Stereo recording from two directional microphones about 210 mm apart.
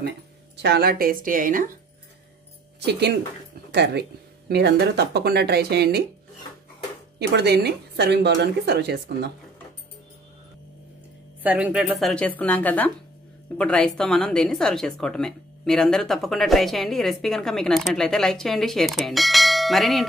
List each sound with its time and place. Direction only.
0.6 s a woman's voice: 50° right (ahead or behind)
2.8 s a woman's voice: 50° right (ahead or behind)
7.2 s a woman's voice: 50° right (ahead or behind)
11.4 s speech: 5° right (ahead or behind)